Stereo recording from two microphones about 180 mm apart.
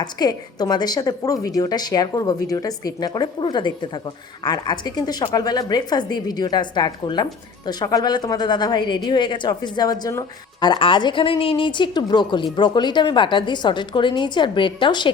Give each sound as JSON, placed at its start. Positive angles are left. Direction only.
{"t": 0.0, "sound": "a woman's voice", "side_deg": 20}